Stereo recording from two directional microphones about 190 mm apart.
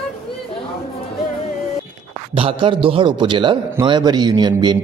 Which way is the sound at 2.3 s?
30° right (ahead or behind).